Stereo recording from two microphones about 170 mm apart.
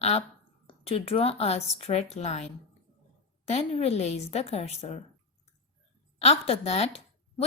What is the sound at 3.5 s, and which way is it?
A woman's voice, 40° left (ahead or behind).